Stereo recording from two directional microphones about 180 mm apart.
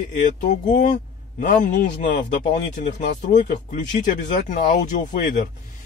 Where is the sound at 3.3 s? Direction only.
45° left (ahead or behind).